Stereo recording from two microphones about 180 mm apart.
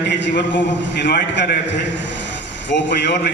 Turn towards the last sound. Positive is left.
turn(degrees=75)  # may be behind; listen again after turning